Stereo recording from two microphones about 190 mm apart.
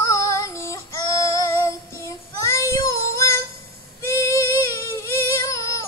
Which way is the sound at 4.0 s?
15° left (ahead or behind).